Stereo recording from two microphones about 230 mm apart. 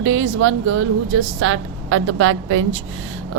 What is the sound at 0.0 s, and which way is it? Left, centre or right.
A woman's voice, right.